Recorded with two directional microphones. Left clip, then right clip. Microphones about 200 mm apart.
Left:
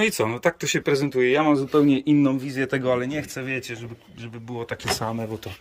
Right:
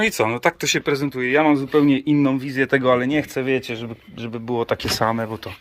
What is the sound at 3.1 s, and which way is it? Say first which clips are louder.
Speech: right 8 dB; 20° right (ahead or behind).